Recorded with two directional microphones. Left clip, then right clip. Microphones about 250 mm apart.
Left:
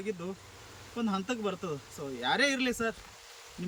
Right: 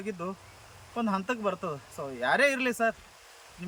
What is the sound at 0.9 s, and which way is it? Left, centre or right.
Speech, centre.